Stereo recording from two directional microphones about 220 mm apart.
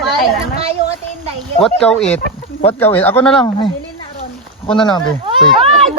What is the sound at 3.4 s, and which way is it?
Speech, 20° left (ahead or behind).